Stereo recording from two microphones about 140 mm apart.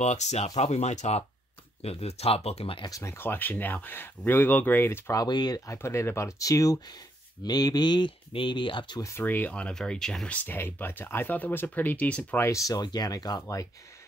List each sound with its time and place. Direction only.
0.0 s speech: 55° left (ahead or behind)
2.8 s speech: 20° left (ahead or behind)
5.2 s speech: 30° left (ahead or behind)
9.1 s speech: 15° left (ahead or behind)
12.4 s speech: 25° left (ahead or behind)